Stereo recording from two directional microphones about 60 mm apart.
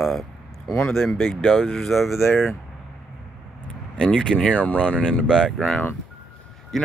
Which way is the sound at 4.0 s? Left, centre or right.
Centre.